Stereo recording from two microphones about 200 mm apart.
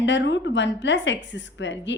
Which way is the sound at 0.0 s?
65° left (ahead or behind).